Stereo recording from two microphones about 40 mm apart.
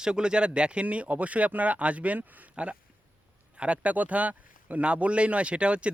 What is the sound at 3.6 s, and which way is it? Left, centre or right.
Speech, right.